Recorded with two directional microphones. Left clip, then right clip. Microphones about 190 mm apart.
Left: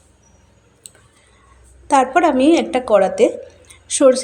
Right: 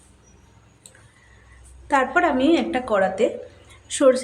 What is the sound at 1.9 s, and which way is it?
A woman's voice, 25° left (ahead or behind).